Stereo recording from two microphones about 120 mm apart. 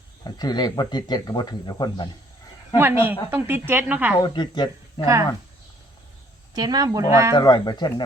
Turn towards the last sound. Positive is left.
turn(degrees=35)  # may be behind; listen again after turning